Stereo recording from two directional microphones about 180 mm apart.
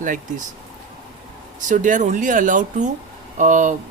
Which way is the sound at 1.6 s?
45° right (ahead or behind).